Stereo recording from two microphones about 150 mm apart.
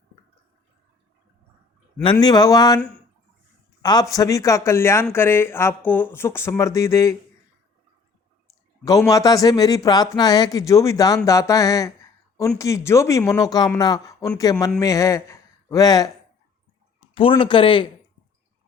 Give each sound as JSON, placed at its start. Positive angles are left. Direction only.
{"t": 2.1, "sound": "a man's voice", "side_deg": 25}
{"t": 8.8, "sound": "a man's voice", "side_deg": 25}
{"t": 17.2, "sound": "speech", "side_deg": 35}